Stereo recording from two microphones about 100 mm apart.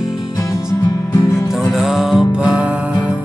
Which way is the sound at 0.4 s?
30° left (ahead or behind).